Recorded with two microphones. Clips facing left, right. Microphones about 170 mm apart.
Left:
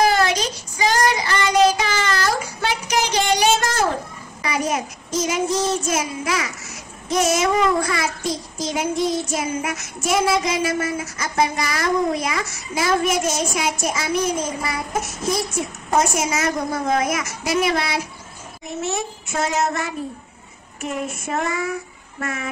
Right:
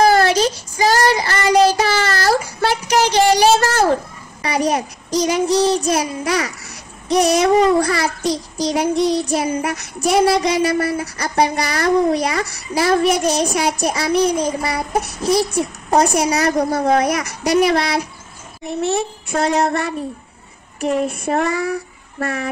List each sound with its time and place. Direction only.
0.0 s child singing: 35° right (ahead or behind)
17.3 s a child's voice: centre (ahead or behind)
18.7 s child singing: 30° right (ahead or behind)